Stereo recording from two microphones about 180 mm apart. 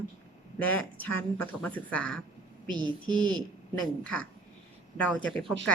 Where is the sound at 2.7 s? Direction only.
25° right (ahead or behind).